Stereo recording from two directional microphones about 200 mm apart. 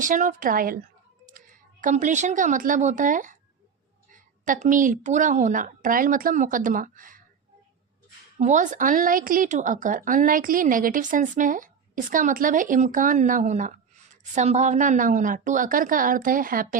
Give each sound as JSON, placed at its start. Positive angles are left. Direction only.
{"t": 0.0, "sound": "a woman's voice", "side_deg": -40}
{"t": 8.4, "sound": "a woman's voice", "side_deg": -35}